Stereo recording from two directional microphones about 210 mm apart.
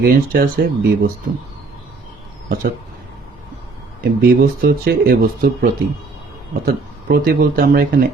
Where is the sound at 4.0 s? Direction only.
40° right (ahead or behind).